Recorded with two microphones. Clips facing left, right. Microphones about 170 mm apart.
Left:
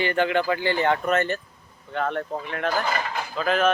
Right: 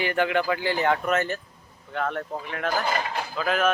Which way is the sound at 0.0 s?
5° right (ahead or behind).